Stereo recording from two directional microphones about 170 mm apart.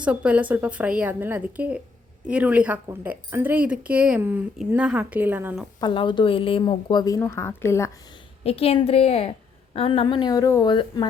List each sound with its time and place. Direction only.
0.0 s speech: 5° right (ahead or behind)
5.8 s a woman's voice: 30° left (ahead or behind)
8.4 s a woman's voice: 35° left (ahead or behind)